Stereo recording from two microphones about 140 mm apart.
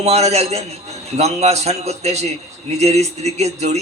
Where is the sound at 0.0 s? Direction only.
50° right (ahead or behind).